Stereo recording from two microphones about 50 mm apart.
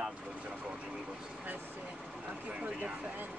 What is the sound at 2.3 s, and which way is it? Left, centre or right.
Speech, right.